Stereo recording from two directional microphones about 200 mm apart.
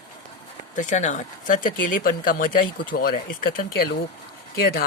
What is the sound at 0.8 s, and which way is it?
Speech, 35° left (ahead or behind).